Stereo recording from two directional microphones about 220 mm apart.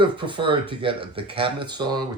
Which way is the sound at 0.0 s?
20° right (ahead or behind).